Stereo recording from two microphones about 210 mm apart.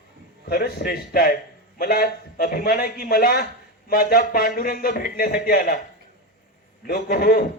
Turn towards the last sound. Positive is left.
turn(degrees=45)  # may be behind; listen again after turning